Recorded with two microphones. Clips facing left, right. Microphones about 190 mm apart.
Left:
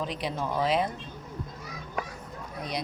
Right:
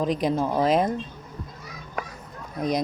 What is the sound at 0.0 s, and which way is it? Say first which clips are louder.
Speech: right 8 dB; 45° right (ahead or behind).